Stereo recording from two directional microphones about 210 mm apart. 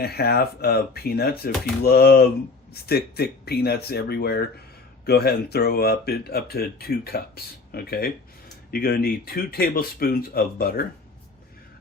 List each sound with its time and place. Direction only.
0.0 s speech: 50° left (ahead or behind)